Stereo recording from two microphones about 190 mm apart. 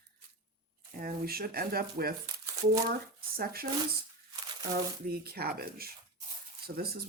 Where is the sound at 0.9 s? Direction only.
50° right (ahead or behind).